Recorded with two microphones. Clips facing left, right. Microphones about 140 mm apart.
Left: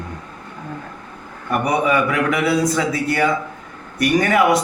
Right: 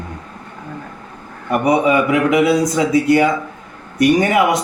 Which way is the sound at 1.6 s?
20° right (ahead or behind).